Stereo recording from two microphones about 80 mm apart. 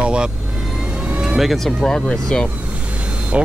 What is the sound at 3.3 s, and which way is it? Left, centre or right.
Speech, centre.